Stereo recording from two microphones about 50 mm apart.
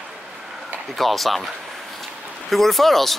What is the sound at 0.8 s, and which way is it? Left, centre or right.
Speech, centre.